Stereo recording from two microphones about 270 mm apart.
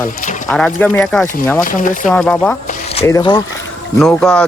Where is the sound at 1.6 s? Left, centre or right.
Left.